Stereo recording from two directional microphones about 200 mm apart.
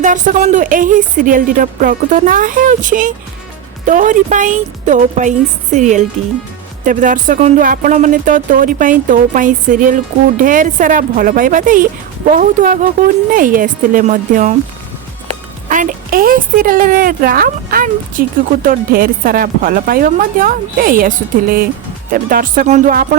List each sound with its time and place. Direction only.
0.0 s speech: 40° right (ahead or behind)
15.7 s speech: 40° right (ahead or behind)